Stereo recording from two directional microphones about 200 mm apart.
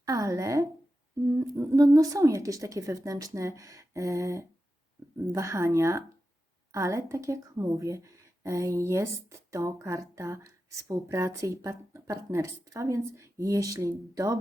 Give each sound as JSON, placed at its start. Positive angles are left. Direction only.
{"t": 0.0, "sound": "speech", "side_deg": -15}